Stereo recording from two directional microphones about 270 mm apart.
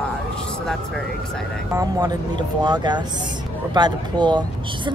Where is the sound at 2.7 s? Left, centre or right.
Centre.